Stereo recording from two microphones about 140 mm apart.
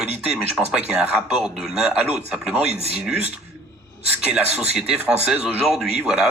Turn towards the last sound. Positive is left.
turn(degrees=-5)  # may be behind; listen again after turning